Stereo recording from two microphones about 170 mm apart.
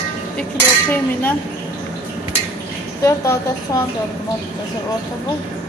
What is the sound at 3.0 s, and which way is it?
Speech, 15° left (ahead or behind).